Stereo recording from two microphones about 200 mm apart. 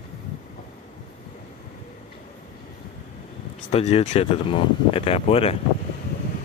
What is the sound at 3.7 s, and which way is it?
Speech, 30° left (ahead or behind).